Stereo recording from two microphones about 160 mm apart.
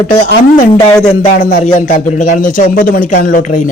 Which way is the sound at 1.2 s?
50° left (ahead or behind).